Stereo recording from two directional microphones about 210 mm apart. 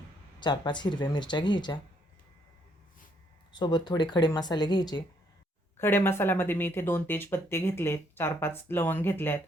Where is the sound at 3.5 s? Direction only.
20° left (ahead or behind).